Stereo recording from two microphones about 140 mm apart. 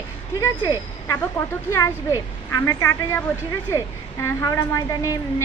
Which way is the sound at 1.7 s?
25° left (ahead or behind).